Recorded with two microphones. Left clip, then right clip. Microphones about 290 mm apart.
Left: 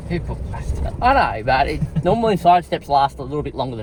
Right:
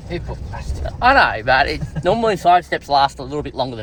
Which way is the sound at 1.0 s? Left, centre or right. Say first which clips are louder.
Right 3 dB; right.